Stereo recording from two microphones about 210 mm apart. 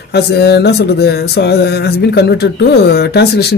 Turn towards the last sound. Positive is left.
turn(degrees=50)  # may be behind; listen again after turning